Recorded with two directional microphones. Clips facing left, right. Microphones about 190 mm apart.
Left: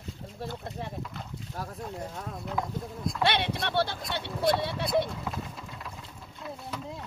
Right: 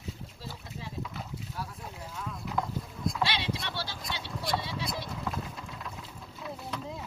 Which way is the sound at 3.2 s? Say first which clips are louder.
Left 7 dB; 60° left (ahead or behind).